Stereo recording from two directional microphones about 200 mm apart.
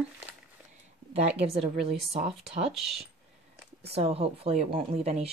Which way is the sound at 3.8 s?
30° right (ahead or behind).